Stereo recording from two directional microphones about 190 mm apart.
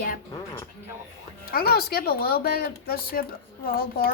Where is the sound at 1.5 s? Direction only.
55° left (ahead or behind).